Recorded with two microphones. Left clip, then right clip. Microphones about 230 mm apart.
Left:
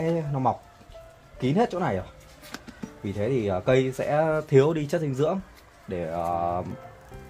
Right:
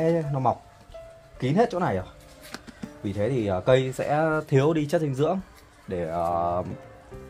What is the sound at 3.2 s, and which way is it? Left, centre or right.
Speech, centre.